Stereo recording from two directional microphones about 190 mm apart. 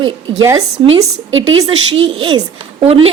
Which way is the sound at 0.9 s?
90° right.